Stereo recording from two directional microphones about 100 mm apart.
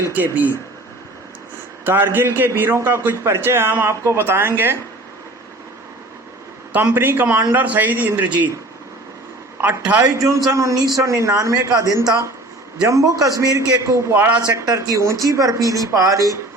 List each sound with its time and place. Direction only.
0.2 s a man's voice: 20° right (ahead or behind)
1.8 s a man's voice: 20° right (ahead or behind)
6.9 s a man's voice: 20° right (ahead or behind)
9.6 s a man's voice: 15° right (ahead or behind)
10.2 s speech: 30° right (ahead or behind)
14.2 s a man's voice: 15° right (ahead or behind)
14.5 s speech: 35° right (ahead or behind)